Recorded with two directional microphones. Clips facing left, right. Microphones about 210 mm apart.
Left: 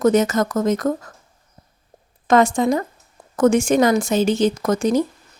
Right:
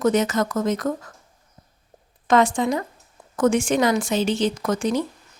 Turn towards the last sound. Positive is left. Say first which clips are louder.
# left 4 dB
turn(degrees=45)  # may be behind; listen again after turning